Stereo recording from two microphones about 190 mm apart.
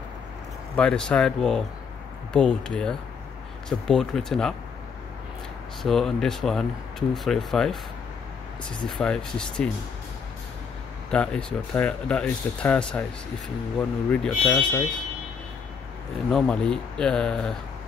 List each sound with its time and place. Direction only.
0.7 s speech: 5° left (ahead or behind)
5.8 s speech: centre (ahead or behind)
8.8 s speech: 5° left (ahead or behind)
11.1 s speech: 5° left (ahead or behind)
16.3 s speech: 5° left (ahead or behind)